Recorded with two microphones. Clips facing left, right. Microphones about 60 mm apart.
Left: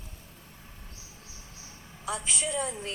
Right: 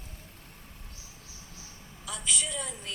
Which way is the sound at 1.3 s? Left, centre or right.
Left.